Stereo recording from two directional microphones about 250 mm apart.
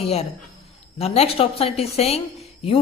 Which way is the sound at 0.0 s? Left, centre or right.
Left.